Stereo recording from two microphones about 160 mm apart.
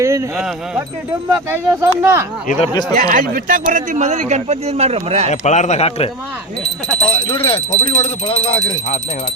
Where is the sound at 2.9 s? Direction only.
55° right (ahead or behind); by 5.3 s 40° right (ahead or behind).